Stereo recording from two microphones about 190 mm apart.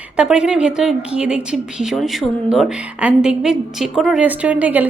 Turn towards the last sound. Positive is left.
turn(degrees=-10)  # may be behind; listen again after turning